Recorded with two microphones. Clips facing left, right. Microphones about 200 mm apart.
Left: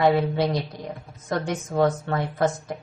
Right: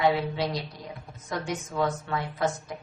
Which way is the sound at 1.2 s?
45° left (ahead or behind).